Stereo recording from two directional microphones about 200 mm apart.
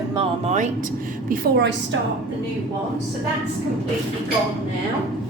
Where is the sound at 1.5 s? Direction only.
60° right (ahead or behind).